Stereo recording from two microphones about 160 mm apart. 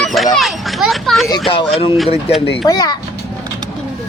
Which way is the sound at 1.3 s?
35° left (ahead or behind).